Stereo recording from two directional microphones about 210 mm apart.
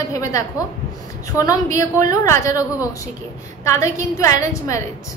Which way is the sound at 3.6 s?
15° left (ahead or behind).